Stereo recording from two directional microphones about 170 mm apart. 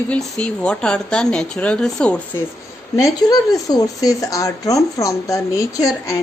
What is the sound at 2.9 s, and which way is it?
Speech, 20° left (ahead or behind).